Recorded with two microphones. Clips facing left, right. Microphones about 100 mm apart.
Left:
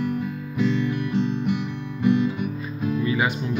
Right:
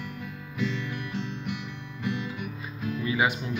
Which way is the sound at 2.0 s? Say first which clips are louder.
Left 12 dB; 35° left (ahead or behind).